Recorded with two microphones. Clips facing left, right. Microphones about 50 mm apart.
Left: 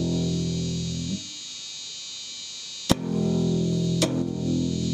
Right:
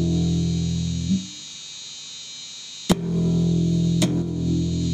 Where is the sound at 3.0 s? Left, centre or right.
Centre.